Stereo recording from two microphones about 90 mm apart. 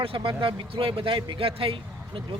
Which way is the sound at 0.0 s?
80° right.